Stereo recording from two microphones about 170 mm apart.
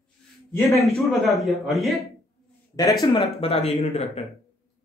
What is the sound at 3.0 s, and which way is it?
Speech, 30° left (ahead or behind).